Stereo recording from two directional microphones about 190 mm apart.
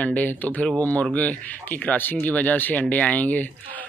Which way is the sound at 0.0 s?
10° left (ahead or behind).